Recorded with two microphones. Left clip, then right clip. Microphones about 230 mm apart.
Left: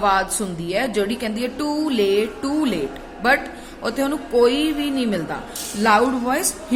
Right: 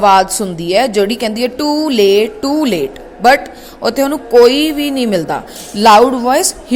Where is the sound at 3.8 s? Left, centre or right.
Right.